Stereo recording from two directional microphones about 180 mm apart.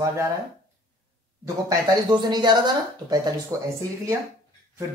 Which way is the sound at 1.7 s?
20° right (ahead or behind).